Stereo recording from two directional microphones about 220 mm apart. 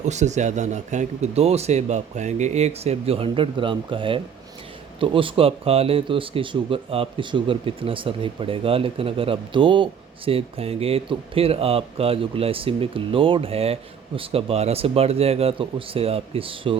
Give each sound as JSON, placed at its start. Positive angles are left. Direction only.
{"t": 0.0, "sound": "speech", "side_deg": -30}